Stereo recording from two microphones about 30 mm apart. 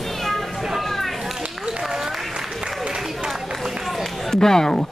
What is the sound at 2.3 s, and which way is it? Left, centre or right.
Applause, right.